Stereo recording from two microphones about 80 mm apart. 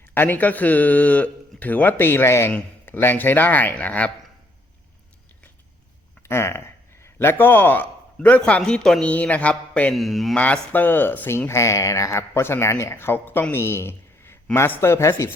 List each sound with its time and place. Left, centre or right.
0.1 s a man's voice: left
6.2 s a man's voice: left; by 9.9 s centre
9.9 s speech: centre
10.3 s a man's voice: centre; by 12.2 s left
12.3 s speech: left